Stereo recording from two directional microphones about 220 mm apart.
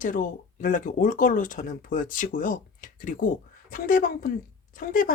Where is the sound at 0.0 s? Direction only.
40° left (ahead or behind).